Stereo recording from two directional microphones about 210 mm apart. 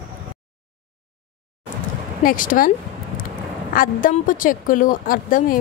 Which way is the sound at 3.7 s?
40° left (ahead or behind).